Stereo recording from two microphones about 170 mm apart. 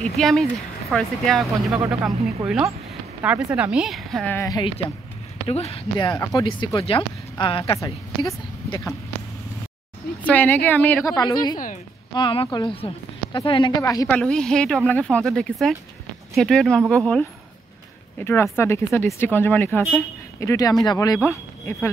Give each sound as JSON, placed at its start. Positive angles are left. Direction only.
{"t": 0.0, "sound": "speech", "side_deg": 0}
{"t": 4.4, "sound": "speech", "side_deg": 25}
{"t": 7.8, "sound": "speech", "side_deg": 20}
{"t": 10.2, "sound": "speech", "side_deg": 10}
{"t": 11.1, "sound": "speech", "side_deg": 25}
{"t": 14.0, "sound": "speech", "side_deg": 5}